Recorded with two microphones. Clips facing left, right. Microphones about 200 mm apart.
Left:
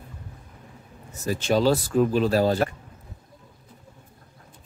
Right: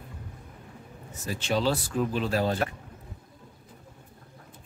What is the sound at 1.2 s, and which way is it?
Speech, 45° left (ahead or behind).